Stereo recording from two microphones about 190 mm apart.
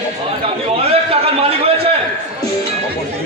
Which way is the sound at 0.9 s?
30° right (ahead or behind).